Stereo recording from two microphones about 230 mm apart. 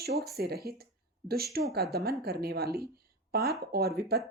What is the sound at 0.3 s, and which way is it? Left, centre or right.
Speech, right.